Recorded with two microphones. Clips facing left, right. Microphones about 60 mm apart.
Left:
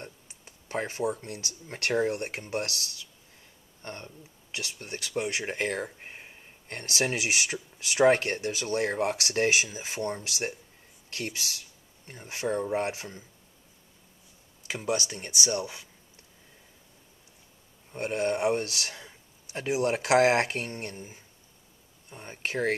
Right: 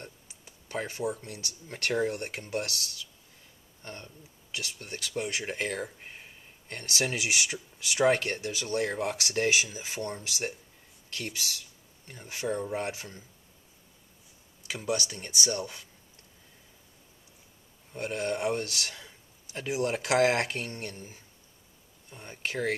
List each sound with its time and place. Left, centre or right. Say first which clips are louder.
0.0 s speech: left 2 dB; left
3.8 s speech: left 3 dB; left
4.6 s speech: left 1 dB; left
14.7 s speech: left 2 dB; centre
17.9 s speech: left 3 dB; left